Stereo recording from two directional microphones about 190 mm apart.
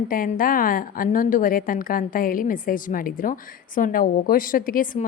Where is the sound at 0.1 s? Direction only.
45° left (ahead or behind).